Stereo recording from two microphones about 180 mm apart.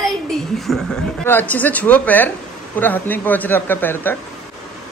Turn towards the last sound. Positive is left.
turn(degrees=10)  # may be behind; listen again after turning